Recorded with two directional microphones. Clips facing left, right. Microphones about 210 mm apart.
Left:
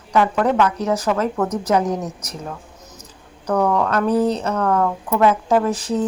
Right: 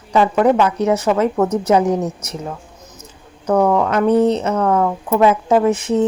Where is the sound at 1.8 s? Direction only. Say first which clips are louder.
Right 5 dB; 10° right (ahead or behind).